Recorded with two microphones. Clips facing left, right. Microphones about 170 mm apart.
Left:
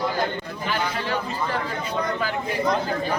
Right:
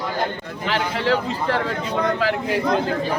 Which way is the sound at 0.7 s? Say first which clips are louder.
Right 6 dB; 90° right.